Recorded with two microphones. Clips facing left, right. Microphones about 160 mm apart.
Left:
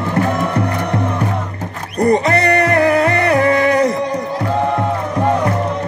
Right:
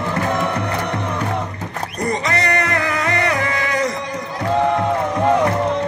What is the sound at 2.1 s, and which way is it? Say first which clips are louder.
Music: left 7 dB; 55° left (ahead or behind).